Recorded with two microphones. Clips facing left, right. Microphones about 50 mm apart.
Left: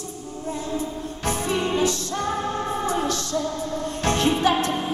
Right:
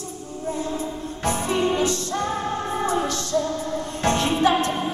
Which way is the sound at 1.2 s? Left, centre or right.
Right.